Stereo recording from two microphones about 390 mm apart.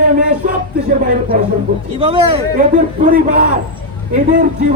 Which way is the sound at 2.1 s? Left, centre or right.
Centre.